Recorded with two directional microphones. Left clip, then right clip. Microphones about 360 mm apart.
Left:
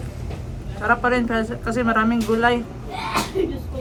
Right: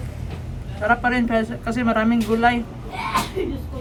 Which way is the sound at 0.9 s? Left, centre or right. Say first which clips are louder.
Even; centre.